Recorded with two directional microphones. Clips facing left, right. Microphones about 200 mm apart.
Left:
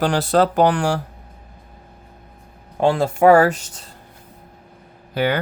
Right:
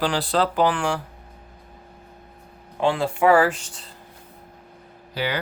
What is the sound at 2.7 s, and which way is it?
Speech, 40° left (ahead or behind).